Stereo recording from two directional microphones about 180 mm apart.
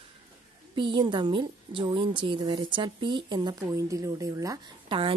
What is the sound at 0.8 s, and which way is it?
A woman's voice, 25° right (ahead or behind).